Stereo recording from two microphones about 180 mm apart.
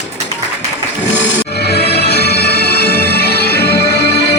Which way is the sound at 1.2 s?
80° left.